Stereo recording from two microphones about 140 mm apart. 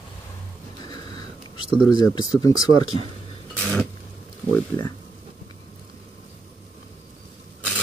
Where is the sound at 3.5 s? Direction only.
10° left (ahead or behind).